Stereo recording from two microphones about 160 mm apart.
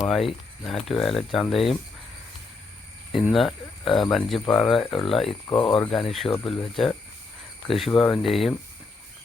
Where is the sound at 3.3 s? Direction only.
Centre (ahead or behind).